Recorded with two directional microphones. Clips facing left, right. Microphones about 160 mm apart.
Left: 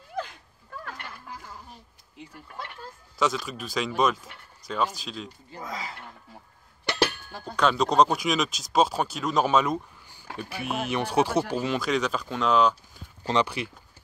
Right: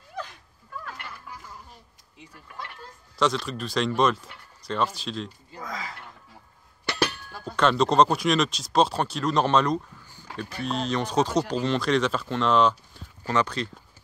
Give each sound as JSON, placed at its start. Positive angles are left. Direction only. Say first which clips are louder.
{"t": 3.2, "sound": "speech", "louder": "right 2 dB", "side_deg": 0}
{"t": 5.5, "sound": "speech", "louder": "even", "side_deg": 25}
{"t": 7.0, "sound": "a sound", "louder": "left 1 dB", "side_deg": 25}
{"t": 7.5, "sound": "speech", "louder": "right 1 dB", "side_deg": 0}
{"t": 13.2, "sound": "speech", "louder": "even", "side_deg": 15}